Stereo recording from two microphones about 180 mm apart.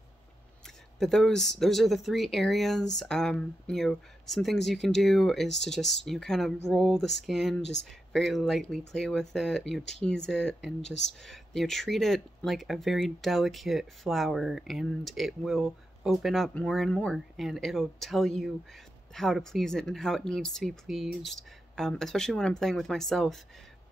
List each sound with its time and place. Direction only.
0.9 s speech: centre (ahead or behind)